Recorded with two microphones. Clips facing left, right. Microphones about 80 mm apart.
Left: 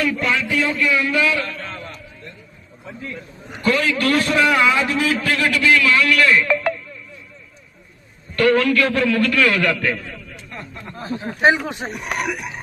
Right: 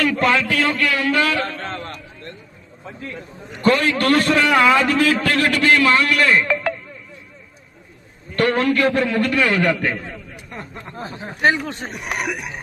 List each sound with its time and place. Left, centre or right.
0.0 s a sound: right
3.6 s a man's voice: right
8.4 s a man's voice: right
11.3 s speech: centre
11.9 s speech: centre